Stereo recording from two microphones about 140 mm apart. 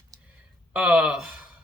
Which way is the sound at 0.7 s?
10° right (ahead or behind).